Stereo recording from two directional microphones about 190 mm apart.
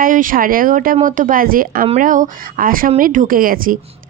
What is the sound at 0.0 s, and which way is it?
A woman's voice, 45° right (ahead or behind).